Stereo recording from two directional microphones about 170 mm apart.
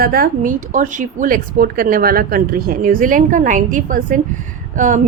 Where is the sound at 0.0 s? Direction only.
60° right (ahead or behind).